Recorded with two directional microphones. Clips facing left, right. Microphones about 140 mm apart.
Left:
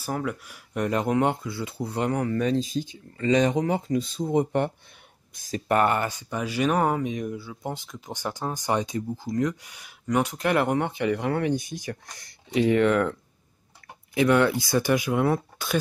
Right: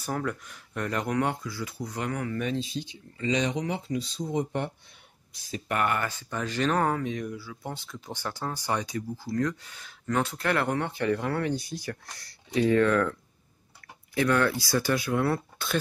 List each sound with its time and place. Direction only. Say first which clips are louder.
0.0 s speech: left 2 dB; 5° left (ahead or behind)
0.8 s speech: left 5 dB; 20° left (ahead or behind); by 4.7 s 55° left (ahead or behind)
5.3 s speech: left 7 dB; 45° left (ahead or behind)
6.0 s speech: left 3 dB; 15° left (ahead or behind)
14.1 s speech: left 4 dB; 20° left (ahead or behind)